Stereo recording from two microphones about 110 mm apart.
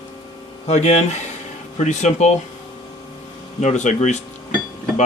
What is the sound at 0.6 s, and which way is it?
Speech, 85° left.